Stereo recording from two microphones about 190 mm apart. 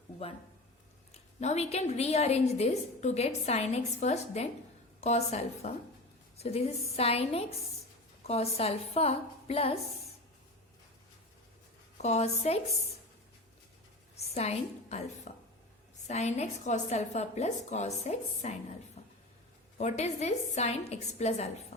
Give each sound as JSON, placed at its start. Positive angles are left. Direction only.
{"t": 1.1, "sound": "a woman's voice", "side_deg": 35}
{"t": 12.0, "sound": "a woman's voice", "side_deg": 35}
{"t": 14.3, "sound": "a woman's voice", "side_deg": 35}
{"t": 19.0, "sound": "a sound", "side_deg": 35}
{"t": 19.8, "sound": "a woman's voice", "side_deg": 35}